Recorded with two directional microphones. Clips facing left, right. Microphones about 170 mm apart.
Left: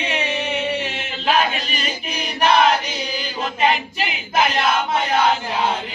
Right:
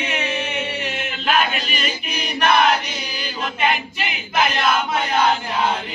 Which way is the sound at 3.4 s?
35° left (ahead or behind).